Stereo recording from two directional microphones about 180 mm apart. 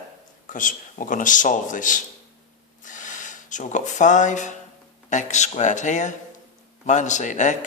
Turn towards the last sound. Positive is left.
turn(degrees=45)  # may be behind; listen again after turning